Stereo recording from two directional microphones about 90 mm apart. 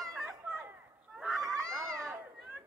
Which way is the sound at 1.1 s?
Centre (ahead or behind).